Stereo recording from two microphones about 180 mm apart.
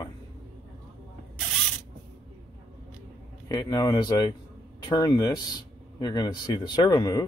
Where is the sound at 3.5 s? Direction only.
20° left (ahead or behind).